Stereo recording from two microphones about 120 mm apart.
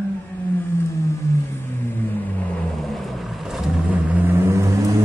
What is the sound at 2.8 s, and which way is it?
Vehicle, centre (ahead or behind).